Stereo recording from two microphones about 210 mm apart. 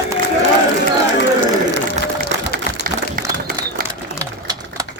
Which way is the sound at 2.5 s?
45° right (ahead or behind).